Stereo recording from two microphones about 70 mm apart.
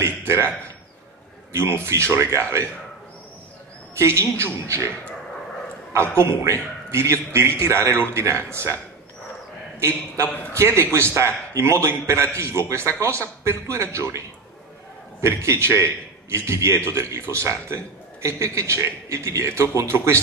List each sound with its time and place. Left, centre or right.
0.0 s a man's voice: right
1.5 s a man's voice: right
3.9 s a man's voice: right
6.1 s a man's voice: right
9.8 s a man's voice: right
10.2 s a man's voice: left
10.5 s a man's voice: right
15.2 s a man's voice: right